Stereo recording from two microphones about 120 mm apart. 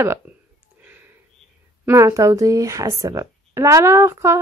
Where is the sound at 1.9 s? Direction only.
25° right (ahead or behind).